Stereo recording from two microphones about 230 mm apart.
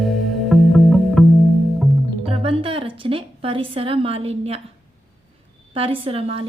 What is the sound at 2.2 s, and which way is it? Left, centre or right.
Music, right.